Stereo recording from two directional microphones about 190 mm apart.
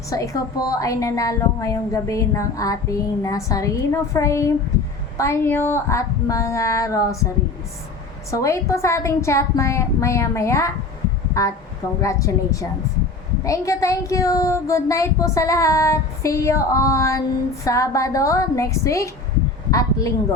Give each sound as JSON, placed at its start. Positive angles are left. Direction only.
{"t": 0.1, "sound": "child singing", "side_deg": 15}
{"t": 8.3, "sound": "child singing", "side_deg": 15}
{"t": 11.9, "sound": "child singing", "side_deg": 15}
{"t": 19.7, "sound": "speech", "side_deg": 15}